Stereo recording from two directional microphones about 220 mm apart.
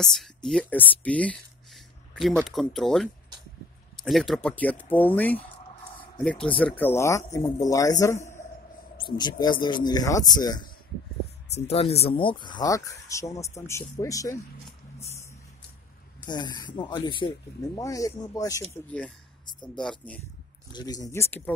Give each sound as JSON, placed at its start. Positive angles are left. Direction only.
{"t": 0.0, "sound": "speech", "side_deg": 0}
{"t": 11.6, "sound": "speech", "side_deg": 30}
{"t": 16.3, "sound": "speech", "side_deg": 20}
{"t": 19.4, "sound": "speech", "side_deg": 20}
{"t": 19.8, "sound": "speech", "side_deg": 5}
{"t": 20.7, "sound": "speech", "side_deg": 15}